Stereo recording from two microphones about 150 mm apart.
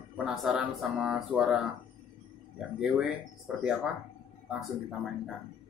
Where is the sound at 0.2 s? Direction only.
Centre (ahead or behind).